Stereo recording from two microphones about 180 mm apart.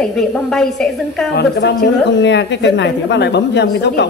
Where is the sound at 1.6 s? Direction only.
70° left (ahead or behind).